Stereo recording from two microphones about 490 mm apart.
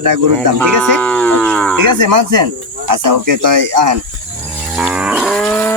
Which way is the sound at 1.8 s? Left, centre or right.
Right.